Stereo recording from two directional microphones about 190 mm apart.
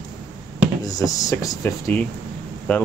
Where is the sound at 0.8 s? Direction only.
20° left (ahead or behind).